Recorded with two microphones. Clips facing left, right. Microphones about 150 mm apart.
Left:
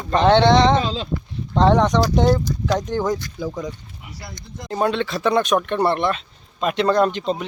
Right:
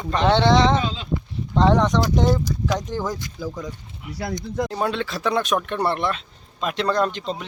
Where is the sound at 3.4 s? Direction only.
20° left (ahead or behind).